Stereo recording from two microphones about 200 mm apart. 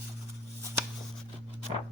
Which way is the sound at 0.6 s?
15° right (ahead or behind).